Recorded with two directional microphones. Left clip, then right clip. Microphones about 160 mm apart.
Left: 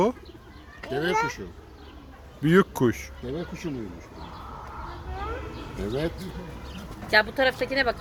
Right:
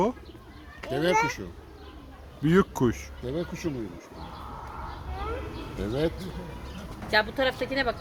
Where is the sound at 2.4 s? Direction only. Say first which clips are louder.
Left 3 dB; 5° left (ahead or behind).